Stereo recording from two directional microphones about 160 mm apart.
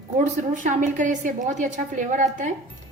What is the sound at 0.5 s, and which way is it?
A woman's voice, 50° right (ahead or behind).